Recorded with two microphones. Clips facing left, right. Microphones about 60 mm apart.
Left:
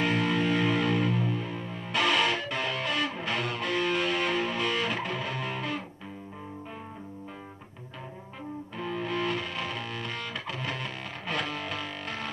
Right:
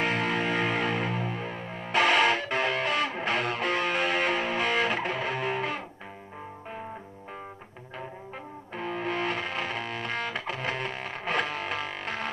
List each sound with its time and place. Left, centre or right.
0.0 s music: right
8.7 s music: right